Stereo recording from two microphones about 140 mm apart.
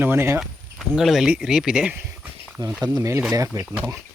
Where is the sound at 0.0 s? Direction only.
15° right (ahead or behind).